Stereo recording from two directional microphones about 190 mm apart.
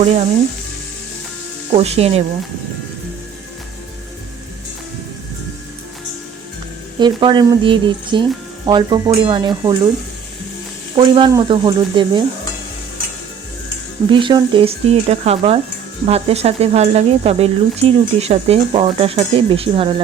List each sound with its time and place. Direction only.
0.0 s speech: 35° right (ahead or behind)
1.7 s speech: 35° right (ahead or behind)
7.0 s speech: 25° right (ahead or behind)
10.9 s speech: 25° right (ahead or behind)
14.1 s speech: 25° right (ahead or behind)